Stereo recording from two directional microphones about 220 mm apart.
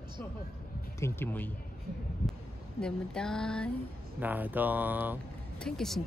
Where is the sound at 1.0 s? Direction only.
10° left (ahead or behind).